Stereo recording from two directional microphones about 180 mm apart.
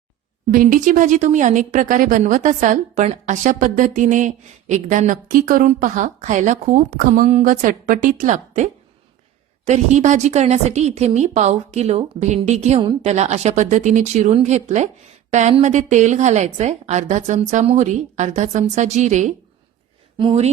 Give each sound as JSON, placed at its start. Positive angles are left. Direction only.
{"t": 0.5, "sound": "a woman's voice", "side_deg": -50}